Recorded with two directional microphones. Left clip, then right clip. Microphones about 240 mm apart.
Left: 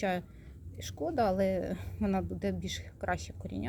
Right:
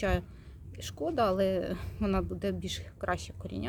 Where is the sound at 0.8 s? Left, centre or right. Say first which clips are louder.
Right 1 dB; centre.